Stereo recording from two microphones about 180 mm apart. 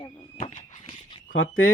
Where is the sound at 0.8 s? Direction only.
30° left (ahead or behind).